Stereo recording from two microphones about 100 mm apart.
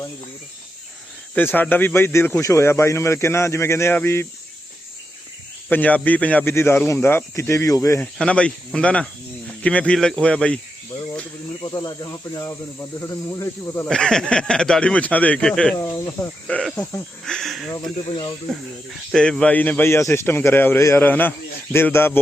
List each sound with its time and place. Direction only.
1.4 s a man's voice: 20° left (ahead or behind)
5.7 s a man's voice: 15° left (ahead or behind); by 8.0 s 30° left (ahead or behind)
8.0 s speech: 10° left (ahead or behind)
11.6 s speech: 40° left (ahead or behind)
13.8 s speech: 5° left (ahead or behind)
15.8 s speech: 30° left (ahead or behind)
17.2 s speech: 5° left (ahead or behind)
19.1 s a man's voice: 5° left (ahead or behind)